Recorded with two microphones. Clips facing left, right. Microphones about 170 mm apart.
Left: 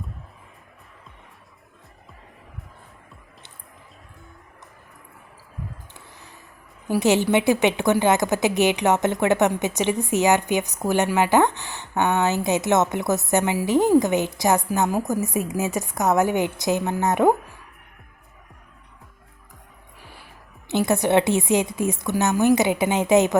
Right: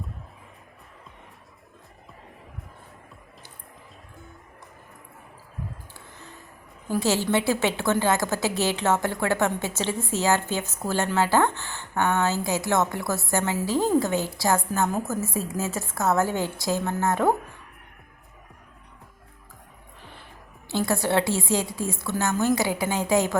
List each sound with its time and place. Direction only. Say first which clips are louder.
6.8 s a woman's voice: left 5 dB; 15° left (ahead or behind)
20.0 s music: left 1 dB; 10° left (ahead or behind)
20.7 s a woman's voice: left 4 dB; 20° left (ahead or behind)